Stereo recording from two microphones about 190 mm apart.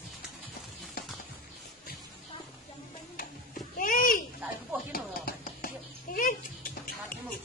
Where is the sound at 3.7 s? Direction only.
45° left (ahead or behind).